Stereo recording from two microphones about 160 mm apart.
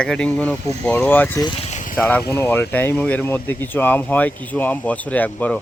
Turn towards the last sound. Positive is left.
turn(degrees=10)  # may be behind; listen again after turning